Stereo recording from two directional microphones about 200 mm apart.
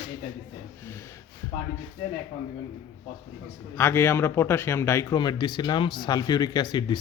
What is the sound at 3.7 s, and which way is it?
A man's voice, 10° left (ahead or behind).